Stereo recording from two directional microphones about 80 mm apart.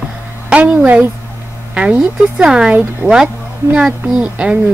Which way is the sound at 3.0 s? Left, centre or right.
Right.